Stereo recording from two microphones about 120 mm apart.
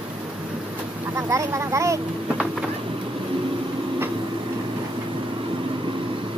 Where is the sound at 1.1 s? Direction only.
25° right (ahead or behind).